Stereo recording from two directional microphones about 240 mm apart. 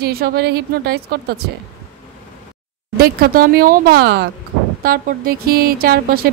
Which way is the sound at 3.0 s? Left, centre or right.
Right.